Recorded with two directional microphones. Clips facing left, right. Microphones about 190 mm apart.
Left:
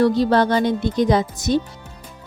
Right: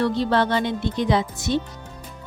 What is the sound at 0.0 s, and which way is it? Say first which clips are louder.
Speech: left 5 dB; 40° left (ahead or behind).